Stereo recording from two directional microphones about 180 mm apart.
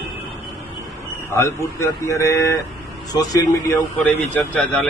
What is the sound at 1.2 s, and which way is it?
Speech, 15° left (ahead or behind).